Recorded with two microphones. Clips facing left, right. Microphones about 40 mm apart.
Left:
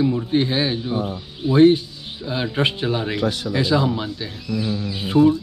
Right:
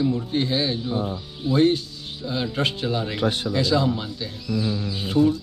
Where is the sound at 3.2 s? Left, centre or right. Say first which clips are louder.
Left 1 dB; right.